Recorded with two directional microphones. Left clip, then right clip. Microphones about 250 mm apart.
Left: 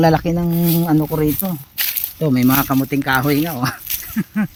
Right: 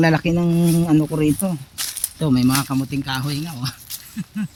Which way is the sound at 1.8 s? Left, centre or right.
Left.